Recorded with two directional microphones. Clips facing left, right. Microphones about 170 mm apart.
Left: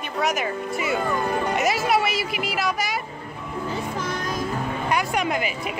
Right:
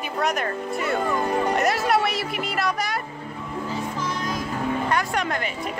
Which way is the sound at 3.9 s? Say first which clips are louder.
Left 1 dB; 60° left (ahead or behind).